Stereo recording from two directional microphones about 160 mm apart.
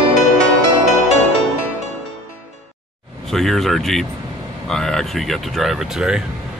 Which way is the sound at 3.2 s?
Centre (ahead or behind).